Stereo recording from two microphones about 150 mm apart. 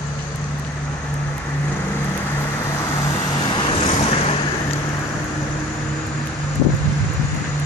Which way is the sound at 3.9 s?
45° left (ahead or behind).